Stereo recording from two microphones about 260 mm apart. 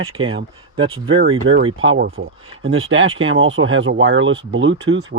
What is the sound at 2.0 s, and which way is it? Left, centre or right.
Speech, right.